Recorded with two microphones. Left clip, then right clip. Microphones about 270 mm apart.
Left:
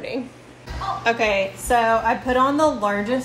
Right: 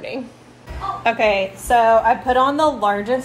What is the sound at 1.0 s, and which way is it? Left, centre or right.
Speech, right.